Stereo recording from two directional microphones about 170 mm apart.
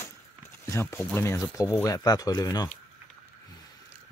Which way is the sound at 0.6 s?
15° left (ahead or behind).